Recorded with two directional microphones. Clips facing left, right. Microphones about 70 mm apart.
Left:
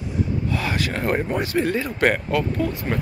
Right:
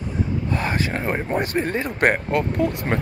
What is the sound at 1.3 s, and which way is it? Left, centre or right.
Speech, right.